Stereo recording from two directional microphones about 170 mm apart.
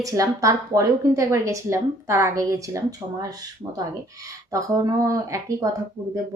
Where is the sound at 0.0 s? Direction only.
20° right (ahead or behind).